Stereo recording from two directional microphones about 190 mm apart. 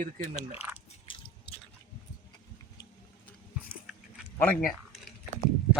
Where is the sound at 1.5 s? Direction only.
60° left (ahead or behind).